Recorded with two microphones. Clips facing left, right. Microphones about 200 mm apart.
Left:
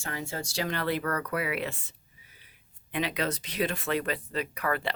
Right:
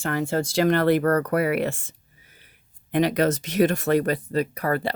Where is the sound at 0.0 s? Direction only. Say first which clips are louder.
Right 11 dB; 65° right (ahead or behind).